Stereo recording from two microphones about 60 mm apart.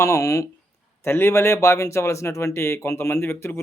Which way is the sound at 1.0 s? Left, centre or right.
Left.